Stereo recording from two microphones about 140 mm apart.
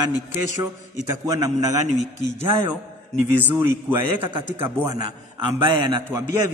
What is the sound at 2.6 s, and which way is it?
A man's voice, 15° right (ahead or behind).